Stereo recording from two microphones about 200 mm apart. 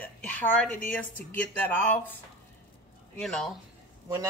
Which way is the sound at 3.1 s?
Centre (ahead or behind).